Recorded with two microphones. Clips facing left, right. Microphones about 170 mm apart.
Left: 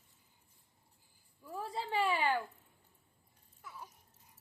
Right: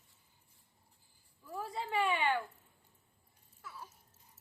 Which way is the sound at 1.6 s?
30° left (ahead or behind).